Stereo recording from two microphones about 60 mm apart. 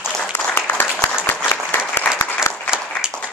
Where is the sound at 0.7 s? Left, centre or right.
Left.